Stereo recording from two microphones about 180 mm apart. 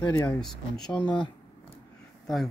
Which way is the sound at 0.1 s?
15° left (ahead or behind).